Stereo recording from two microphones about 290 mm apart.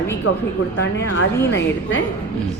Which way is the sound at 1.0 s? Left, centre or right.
Left.